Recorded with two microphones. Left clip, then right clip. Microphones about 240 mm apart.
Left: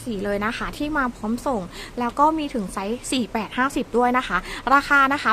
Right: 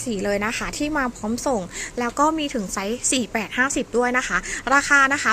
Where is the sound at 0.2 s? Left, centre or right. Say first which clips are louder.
Right 1 dB; centre.